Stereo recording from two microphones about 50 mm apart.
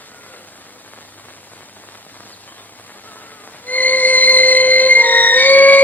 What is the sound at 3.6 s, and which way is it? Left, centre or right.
Music, left.